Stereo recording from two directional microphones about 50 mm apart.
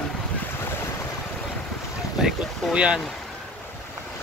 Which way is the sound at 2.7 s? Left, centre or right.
Centre.